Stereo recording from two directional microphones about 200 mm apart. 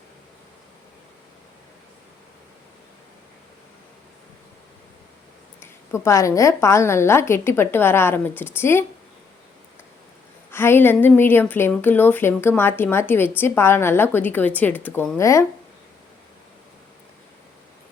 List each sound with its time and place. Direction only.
5.5 s a woman's voice: 15° left (ahead or behind)
10.5 s a woman's voice: 10° left (ahead or behind)